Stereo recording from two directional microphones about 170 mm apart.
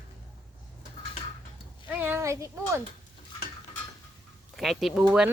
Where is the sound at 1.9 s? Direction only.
10° right (ahead or behind).